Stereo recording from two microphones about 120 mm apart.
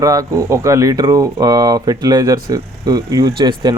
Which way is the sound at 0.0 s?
30° right (ahead or behind).